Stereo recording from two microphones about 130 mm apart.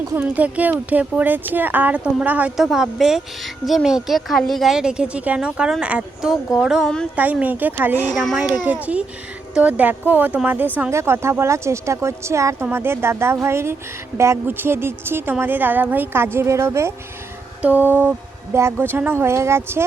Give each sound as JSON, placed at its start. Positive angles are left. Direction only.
{"t": 0.1, "sound": "speech", "side_deg": -15}
{"t": 7.2, "sound": "speech", "side_deg": -10}
{"t": 8.1, "sound": "a child's voice", "side_deg": 5}
{"t": 8.4, "sound": "speech", "side_deg": -10}